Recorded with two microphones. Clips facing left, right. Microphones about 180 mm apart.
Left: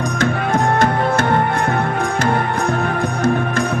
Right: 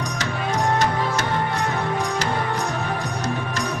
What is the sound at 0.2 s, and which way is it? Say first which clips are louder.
Music: left 7 dB; 55° left (ahead or behind).